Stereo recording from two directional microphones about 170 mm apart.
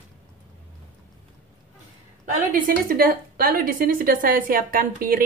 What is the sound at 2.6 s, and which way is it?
A woman's voice, 60° right (ahead or behind).